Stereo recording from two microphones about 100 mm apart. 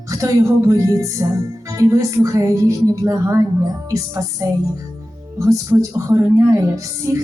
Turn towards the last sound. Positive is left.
turn(degrees=-30)  # may be behind; listen again after turning